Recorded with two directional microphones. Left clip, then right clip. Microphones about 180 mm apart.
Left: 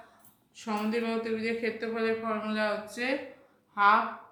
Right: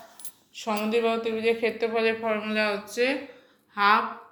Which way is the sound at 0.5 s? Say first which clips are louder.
Right 6 dB; 20° right (ahead or behind).